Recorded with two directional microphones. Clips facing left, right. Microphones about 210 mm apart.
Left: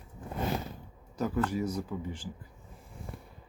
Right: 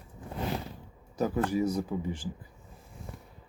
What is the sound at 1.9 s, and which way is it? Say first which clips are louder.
Speech: right 4 dB; 25° right (ahead or behind).